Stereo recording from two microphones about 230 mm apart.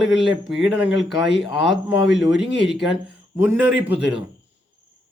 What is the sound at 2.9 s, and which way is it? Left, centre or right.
Speech, centre.